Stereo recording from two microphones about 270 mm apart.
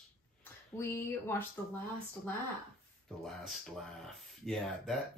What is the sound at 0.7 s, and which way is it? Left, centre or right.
Speech, centre.